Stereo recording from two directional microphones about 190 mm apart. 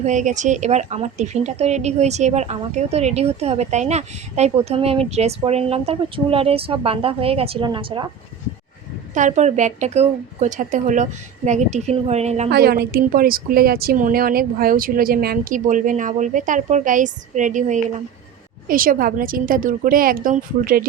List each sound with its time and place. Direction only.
0.0 s speech: 40° right (ahead or behind); by 8.1 s 25° right (ahead or behind)
9.1 s speech: 40° right (ahead or behind)
12.5 s a woman's voice: 55° right (ahead or behind)